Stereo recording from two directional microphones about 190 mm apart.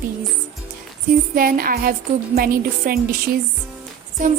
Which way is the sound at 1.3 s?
50° right (ahead or behind).